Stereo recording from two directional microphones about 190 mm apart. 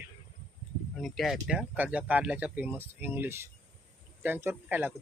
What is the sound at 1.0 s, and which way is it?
Speech, centre (ahead or behind).